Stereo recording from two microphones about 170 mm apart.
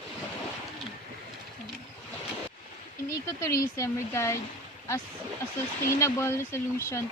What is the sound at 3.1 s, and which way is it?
Speech, 20° left (ahead or behind).